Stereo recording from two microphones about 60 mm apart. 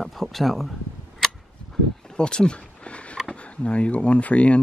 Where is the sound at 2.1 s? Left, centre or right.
Centre.